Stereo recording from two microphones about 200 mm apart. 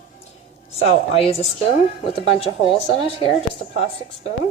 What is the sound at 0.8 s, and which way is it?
Speech, 30° left (ahead or behind).